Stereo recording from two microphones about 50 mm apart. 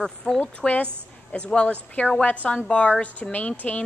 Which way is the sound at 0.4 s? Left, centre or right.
Left.